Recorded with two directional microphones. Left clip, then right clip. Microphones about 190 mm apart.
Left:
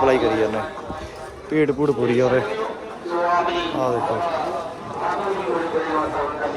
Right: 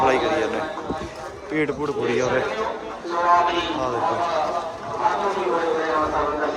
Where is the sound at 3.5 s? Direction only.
55° right (ahead or behind).